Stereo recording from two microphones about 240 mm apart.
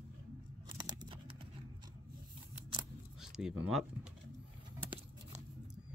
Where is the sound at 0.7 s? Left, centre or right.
Centre.